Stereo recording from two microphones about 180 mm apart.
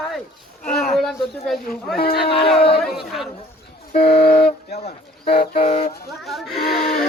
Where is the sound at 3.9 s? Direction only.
60° left (ahead or behind).